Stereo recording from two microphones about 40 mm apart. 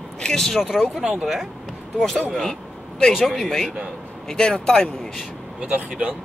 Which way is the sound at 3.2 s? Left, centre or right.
Centre.